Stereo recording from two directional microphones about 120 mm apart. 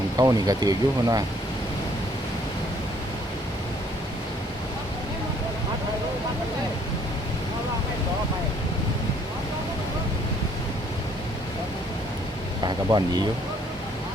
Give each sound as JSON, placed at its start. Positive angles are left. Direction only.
{"t": 0.2, "sound": "speech", "side_deg": -30}
{"t": 12.6, "sound": "vehicle", "side_deg": -35}